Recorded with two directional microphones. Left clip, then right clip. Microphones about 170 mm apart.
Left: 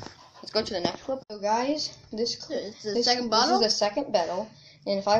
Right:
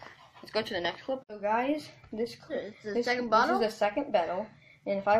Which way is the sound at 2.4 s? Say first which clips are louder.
Left 4 dB; 25° left (ahead or behind).